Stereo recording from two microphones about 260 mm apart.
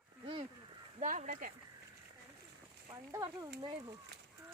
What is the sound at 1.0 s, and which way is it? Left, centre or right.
Speech, right.